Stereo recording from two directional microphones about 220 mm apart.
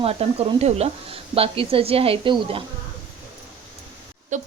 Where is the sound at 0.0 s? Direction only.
25° right (ahead or behind).